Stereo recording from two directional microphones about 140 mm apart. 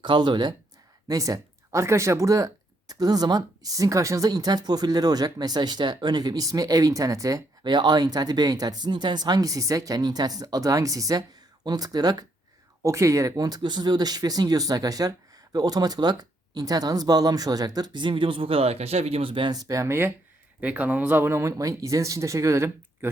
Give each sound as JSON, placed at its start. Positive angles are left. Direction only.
{"t": 0.0, "sound": "speech", "side_deg": -35}